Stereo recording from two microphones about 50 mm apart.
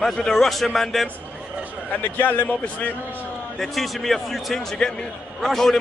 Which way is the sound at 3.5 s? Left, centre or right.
Centre.